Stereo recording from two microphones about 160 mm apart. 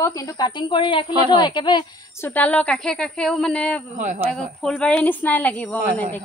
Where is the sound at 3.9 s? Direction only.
50° right (ahead or behind).